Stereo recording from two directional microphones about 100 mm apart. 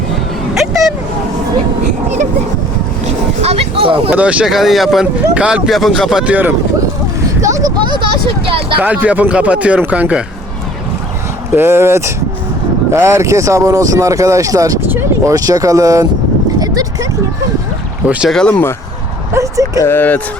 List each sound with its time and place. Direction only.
0.7 s vehicle: 5° right (ahead or behind)
3.1 s a sound: 90° right; by 4.1 s 65° right (ahead or behind)
4.1 s speech: 15° right (ahead or behind)
7.4 s a sound: 35° right (ahead or behind)
7.9 s a sound: 55° right (ahead or behind)
8.8 s speech: 15° right (ahead or behind)
11.5 s speech: 25° right (ahead or behind)
14.8 s speech: 20° right (ahead or behind)
15.3 s speech: 35° right (ahead or behind)
18.0 s speech: 15° right (ahead or behind)
18.3 s speech: 5° left (ahead or behind)
19.3 s speech: 35° right (ahead or behind)
19.8 s speech: 20° left (ahead or behind)